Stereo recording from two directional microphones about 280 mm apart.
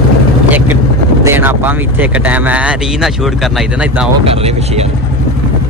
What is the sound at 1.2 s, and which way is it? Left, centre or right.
Speech, centre.